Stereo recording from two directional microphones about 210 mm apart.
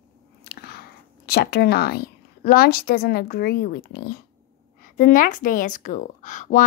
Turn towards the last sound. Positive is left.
turn(degrees=35)  # may be behind; listen again after turning